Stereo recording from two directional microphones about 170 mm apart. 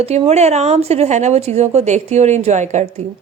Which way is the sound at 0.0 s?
40° right (ahead or behind).